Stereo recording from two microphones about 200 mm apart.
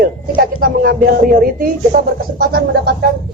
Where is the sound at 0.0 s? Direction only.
45° right (ahead or behind).